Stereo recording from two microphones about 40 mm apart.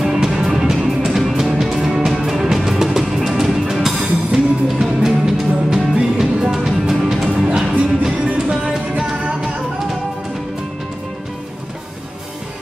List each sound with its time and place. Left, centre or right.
0.0 s music: centre